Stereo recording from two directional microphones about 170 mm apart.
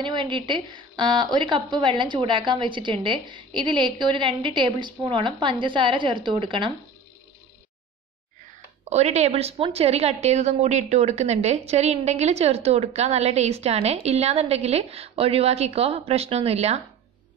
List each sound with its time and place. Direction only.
0.0 s a woman's voice: 30° right (ahead or behind)
8.9 s a woman's voice: 40° right (ahead or behind)